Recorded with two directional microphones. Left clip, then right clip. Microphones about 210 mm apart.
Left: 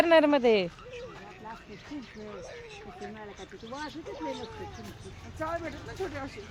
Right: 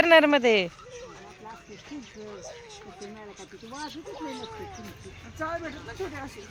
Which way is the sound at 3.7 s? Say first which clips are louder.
Right 1 dB; 15° right (ahead or behind).